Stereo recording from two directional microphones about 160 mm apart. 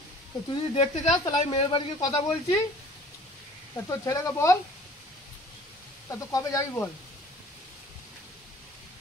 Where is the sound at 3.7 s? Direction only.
20° left (ahead or behind).